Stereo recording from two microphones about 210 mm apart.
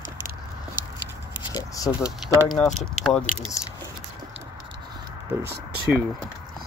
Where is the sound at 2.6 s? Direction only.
5° left (ahead or behind).